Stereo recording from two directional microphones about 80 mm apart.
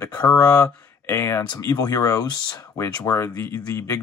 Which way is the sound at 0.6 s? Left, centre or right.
Left.